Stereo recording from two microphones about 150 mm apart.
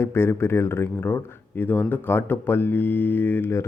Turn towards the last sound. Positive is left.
turn(degrees=15)  # may be behind; listen again after turning